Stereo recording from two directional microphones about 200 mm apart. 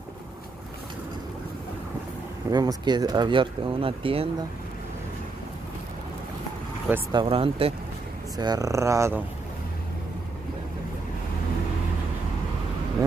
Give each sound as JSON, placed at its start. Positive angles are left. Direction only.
{"t": 2.5, "sound": "speech", "side_deg": -20}
{"t": 7.1, "sound": "speech", "side_deg": -25}